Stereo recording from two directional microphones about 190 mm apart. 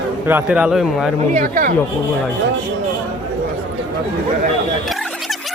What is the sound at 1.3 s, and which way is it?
Speech, 45° right (ahead or behind).